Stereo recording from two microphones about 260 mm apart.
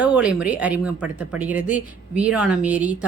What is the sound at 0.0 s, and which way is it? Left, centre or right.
A woman's voice, centre.